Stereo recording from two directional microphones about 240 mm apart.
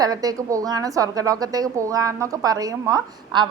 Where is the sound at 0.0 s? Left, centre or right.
Centre.